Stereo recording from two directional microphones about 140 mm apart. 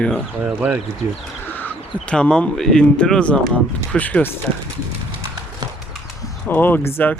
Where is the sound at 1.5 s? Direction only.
10° left (ahead or behind).